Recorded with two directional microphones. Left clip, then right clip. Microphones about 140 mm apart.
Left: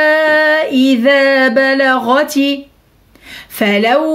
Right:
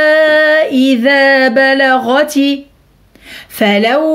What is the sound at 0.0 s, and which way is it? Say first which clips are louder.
Female singing: right 2 dB; 25° right (ahead or behind).